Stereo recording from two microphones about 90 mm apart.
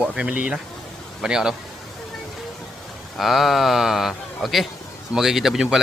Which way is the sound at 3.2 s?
Centre (ahead or behind).